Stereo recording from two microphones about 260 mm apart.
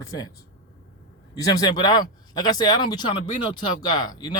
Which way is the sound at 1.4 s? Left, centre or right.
Centre.